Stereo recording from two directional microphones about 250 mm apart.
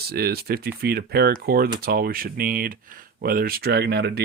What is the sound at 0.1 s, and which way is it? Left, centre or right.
Speech, right.